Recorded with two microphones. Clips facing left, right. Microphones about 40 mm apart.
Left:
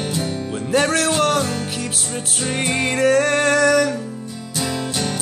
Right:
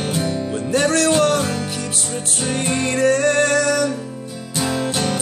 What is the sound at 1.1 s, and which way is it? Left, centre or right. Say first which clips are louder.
Music: right 2 dB; centre.